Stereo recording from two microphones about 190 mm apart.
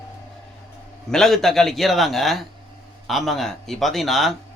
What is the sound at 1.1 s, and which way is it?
A man's voice, centre (ahead or behind).